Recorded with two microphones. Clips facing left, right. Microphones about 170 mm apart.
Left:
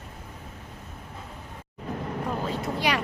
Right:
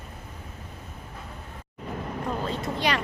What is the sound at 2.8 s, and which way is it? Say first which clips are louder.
Speech: even; 10° left (ahead or behind).